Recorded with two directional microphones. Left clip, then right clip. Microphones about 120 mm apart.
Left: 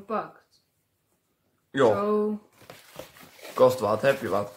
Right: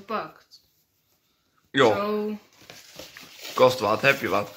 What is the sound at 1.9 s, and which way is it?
Speech, 40° left (ahead or behind).